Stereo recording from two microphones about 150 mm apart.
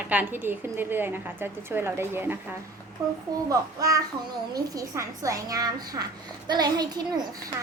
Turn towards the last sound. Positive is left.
turn(degrees=-25)  # may be behind; listen again after turning